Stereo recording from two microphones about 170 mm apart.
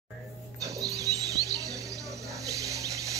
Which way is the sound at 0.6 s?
20° right (ahead or behind).